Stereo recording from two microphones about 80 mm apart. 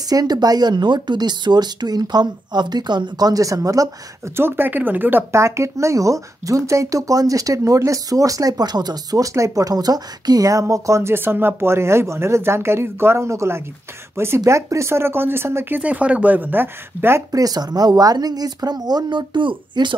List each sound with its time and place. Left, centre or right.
0.1 s speech: right
4.4 s speech: right
9.2 s speech: right
15.8 s speech: centre
17.3 s speech: right